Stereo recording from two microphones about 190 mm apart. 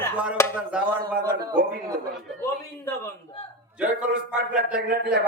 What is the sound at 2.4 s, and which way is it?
Speech, 15° left (ahead or behind).